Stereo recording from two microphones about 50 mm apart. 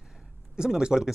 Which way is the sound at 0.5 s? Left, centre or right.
Centre.